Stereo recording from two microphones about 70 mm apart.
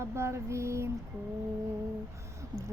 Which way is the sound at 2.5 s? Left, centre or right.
Right.